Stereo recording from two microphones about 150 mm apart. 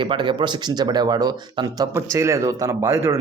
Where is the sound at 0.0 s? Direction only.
35° right (ahead or behind).